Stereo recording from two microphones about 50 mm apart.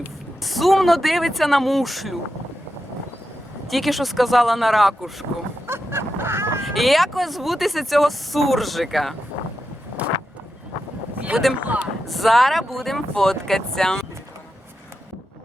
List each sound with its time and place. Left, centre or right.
0.4 s speech: centre
3.7 s speech: centre
5.6 s a sound: right
6.7 s speech: centre
10.0 s a sound: right
11.6 s speech: right
12.0 s speech: centre